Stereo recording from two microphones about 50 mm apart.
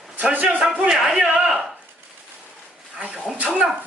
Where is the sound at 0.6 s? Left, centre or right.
Centre.